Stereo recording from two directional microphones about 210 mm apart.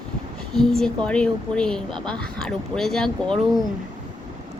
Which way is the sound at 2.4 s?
Centre (ahead or behind).